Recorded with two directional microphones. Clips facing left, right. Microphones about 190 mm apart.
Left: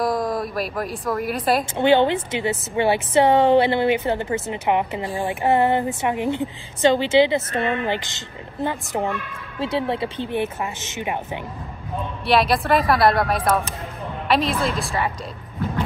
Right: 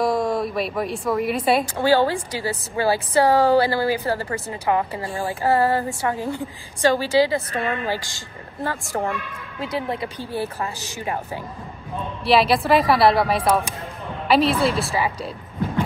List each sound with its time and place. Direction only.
0.0 s speech: centre (ahead or behind)
1.8 s a woman's voice: 25° left (ahead or behind)
9.6 s a woman's voice: 30° left (ahead or behind)
12.3 s a woman's voice: centre (ahead or behind)
14.5 s a woman's voice: centre (ahead or behind)